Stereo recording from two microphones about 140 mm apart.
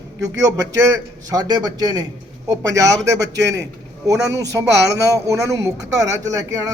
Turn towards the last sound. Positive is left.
turn(degrees=-25)  # may be behind; listen again after turning